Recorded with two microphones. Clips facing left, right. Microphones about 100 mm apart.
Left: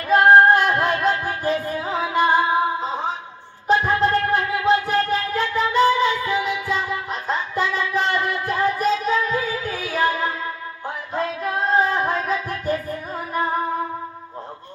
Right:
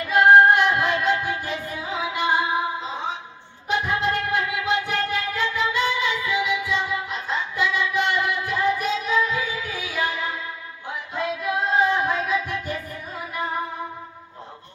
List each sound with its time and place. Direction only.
0.1 s female singing: 40° left (ahead or behind)
1.2 s music: 40° left (ahead or behind)
3.7 s music: 40° left (ahead or behind)